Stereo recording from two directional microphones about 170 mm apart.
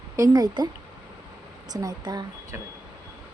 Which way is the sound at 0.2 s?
25° right (ahead or behind).